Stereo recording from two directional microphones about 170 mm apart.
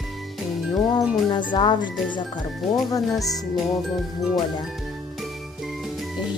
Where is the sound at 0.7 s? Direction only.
25° left (ahead or behind).